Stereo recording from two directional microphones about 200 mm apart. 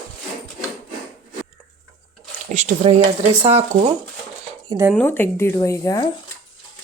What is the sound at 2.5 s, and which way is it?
Speech, 35° right (ahead or behind).